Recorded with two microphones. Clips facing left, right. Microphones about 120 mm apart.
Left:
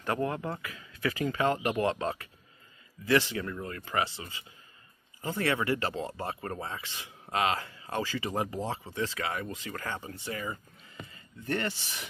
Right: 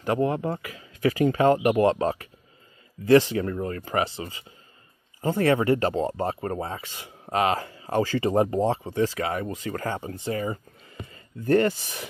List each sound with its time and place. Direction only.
0.0 s speech: 25° right (ahead or behind)